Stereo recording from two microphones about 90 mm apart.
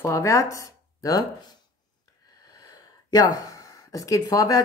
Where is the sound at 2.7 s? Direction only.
45° left (ahead or behind).